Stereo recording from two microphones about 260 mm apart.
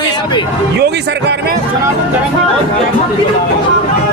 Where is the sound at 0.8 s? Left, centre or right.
Right.